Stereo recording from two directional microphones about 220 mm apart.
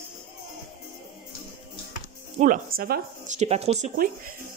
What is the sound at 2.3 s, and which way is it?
Speech, 35° right (ahead or behind).